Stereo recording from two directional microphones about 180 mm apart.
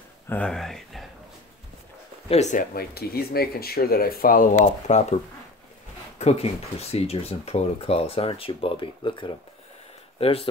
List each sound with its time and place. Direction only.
0.3 s speech: 5° left (ahead or behind)
2.2 s speech: 40° left (ahead or behind)
2.7 s speech: 60° left (ahead or behind); by 5.0 s 45° left (ahead or behind)
6.1 s speech: 35° left (ahead or behind)